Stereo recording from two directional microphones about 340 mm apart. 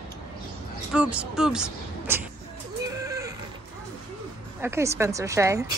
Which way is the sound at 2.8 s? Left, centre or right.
Centre.